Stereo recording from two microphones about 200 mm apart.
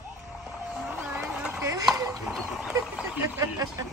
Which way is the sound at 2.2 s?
5° right (ahead or behind).